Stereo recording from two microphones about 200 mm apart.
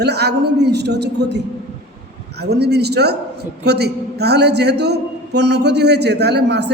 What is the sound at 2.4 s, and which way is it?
A man's voice, 55° right (ahead or behind).